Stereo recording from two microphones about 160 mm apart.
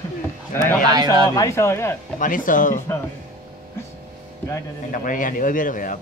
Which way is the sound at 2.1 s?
55° left (ahead or behind).